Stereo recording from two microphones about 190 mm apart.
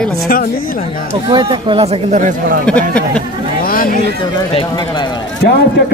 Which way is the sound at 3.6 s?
50° left (ahead or behind).